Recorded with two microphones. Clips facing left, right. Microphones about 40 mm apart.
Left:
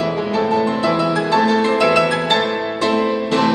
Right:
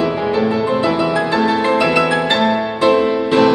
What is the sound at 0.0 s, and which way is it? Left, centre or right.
Music, centre.